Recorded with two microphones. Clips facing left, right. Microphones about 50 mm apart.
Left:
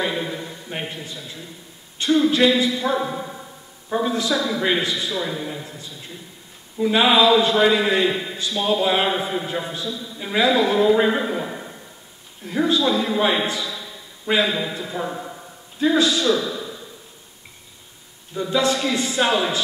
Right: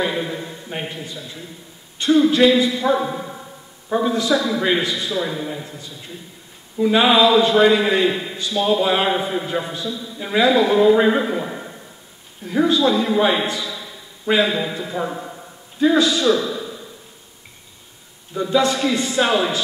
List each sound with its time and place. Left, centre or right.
0.0 s a man's voice: centre
6.8 s a man's voice: centre
18.3 s a man's voice: centre